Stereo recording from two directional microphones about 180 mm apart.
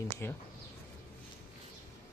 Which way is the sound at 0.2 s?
15° left (ahead or behind).